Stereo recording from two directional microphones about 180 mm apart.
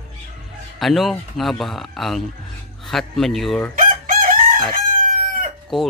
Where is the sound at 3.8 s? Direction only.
50° right (ahead or behind).